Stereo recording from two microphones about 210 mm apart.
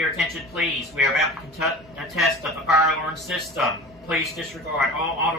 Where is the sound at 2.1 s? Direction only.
Centre (ahead or behind).